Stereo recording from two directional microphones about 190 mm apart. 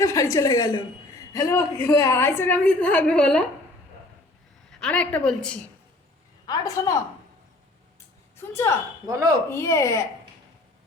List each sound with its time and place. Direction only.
0.0 s a woman's voice: 15° left (ahead or behind)
4.8 s a woman's voice: 5° left (ahead or behind)
6.4 s a woman's voice: 20° left (ahead or behind)
8.4 s a woman's voice: 15° left (ahead or behind)
9.0 s speech: 15° right (ahead or behind)
9.5 s a woman's voice: 15° left (ahead or behind)